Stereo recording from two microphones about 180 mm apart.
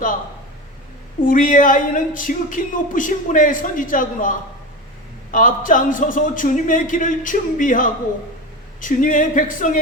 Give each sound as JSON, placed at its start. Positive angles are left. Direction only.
{"t": 1.2, "sound": "speech", "side_deg": 50}